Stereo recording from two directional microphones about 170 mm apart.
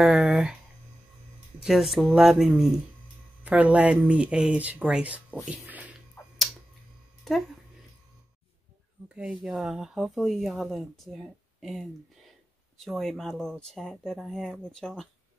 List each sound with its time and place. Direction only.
0.0 s a sound: centre (ahead or behind)
1.6 s speech: centre (ahead or behind)
5.5 s a sound: 10° right (ahead or behind)
7.3 s speech: centre (ahead or behind)
9.1 s speech: 5° right (ahead or behind)
12.7 s speech: centre (ahead or behind)